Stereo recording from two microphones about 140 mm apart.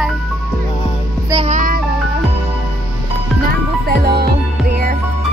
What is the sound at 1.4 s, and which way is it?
Music, 75° right (ahead or behind).